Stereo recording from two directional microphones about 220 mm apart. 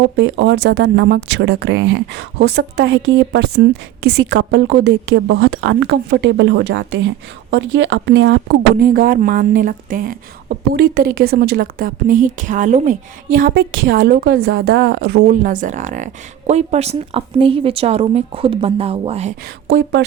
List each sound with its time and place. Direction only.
0.2 s a woman's voice: 55° right (ahead or behind); by 19.3 s 25° right (ahead or behind)
19.6 s speech: 50° right (ahead or behind)